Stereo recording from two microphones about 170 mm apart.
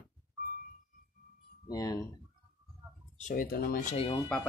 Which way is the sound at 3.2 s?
45° left (ahead or behind).